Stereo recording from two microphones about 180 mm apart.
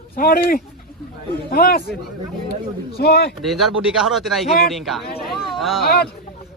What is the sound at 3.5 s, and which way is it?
Speech, centre (ahead or behind).